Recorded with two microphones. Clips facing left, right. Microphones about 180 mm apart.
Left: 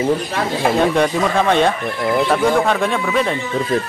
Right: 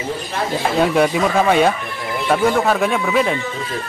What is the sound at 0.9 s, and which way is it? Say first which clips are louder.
Speech: right 1 dB; 5° right (ahead or behind).